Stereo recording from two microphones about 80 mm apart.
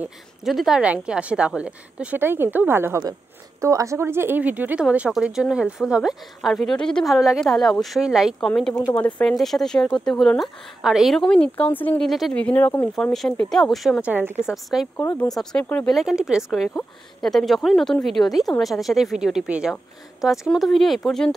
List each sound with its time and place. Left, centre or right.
0.4 s speech: centre
0.8 s a woman's voice: centre
2.1 s speech: right
3.6 s a woman's voice: right; by 8.4 s centre
8.4 s speech: centre
11.1 s speech: centre
12.0 s speech: centre
12.4 s speech: centre
12.9 s speech: centre
14.0 s speech: right
14.5 s speech: centre
17.2 s speech: centre